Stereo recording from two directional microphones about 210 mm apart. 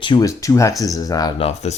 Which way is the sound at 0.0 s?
20° left (ahead or behind).